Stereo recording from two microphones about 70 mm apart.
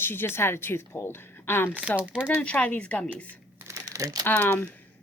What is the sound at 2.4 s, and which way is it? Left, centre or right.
Speech, centre.